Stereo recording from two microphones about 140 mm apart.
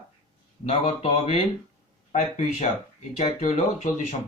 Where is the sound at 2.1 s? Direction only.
55° left (ahead or behind).